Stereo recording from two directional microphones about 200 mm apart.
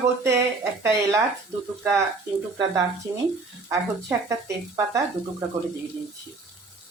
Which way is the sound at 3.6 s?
15° right (ahead or behind).